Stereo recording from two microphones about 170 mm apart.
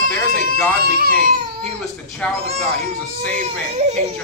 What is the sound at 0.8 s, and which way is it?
Speech, 60° right (ahead or behind).